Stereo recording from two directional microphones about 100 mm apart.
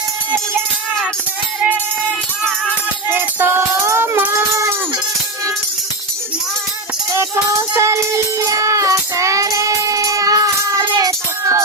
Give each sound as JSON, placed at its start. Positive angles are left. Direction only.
{"t": 3.1, "sound": "music", "side_deg": -20}
{"t": 7.8, "sound": "music", "side_deg": -30}